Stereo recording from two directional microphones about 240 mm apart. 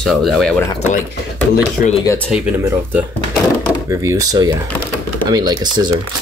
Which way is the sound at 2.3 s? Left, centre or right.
Centre.